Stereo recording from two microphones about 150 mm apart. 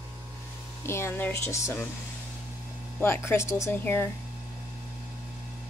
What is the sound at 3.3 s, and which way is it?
Speech, 15° left (ahead or behind).